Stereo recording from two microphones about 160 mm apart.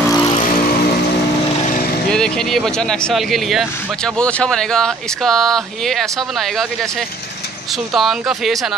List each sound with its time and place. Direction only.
0.1 s vehicle: 30° left (ahead or behind)
2.0 s speech: 5° left (ahead or behind)
7.9 s speech: centre (ahead or behind)